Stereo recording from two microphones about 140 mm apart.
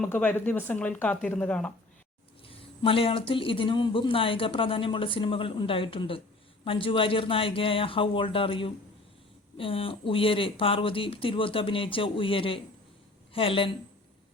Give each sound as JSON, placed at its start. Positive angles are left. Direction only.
{"t": 0.0, "sound": "speech", "side_deg": 10}
{"t": 2.5, "sound": "speech", "side_deg": 40}